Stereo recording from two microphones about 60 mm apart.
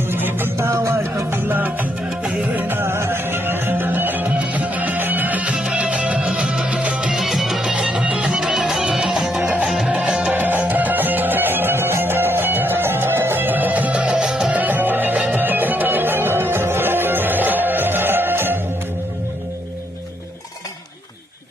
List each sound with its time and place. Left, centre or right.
0.1 s music: right
2.6 s music: right; by 7.1 s centre
7.1 s music: centre
7.6 s music: centre
9.4 s music: right
9.6 s music: centre
10.3 s music: right
14.6 s music: right